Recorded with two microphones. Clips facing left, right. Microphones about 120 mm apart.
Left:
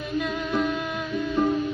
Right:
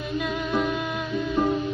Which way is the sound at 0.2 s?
5° right (ahead or behind).